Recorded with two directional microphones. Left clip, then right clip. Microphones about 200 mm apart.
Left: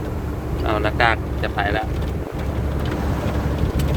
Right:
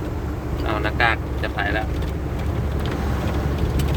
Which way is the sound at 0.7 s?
15° left (ahead or behind).